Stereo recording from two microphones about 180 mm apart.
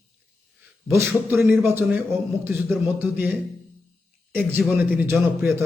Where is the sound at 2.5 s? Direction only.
Centre (ahead or behind).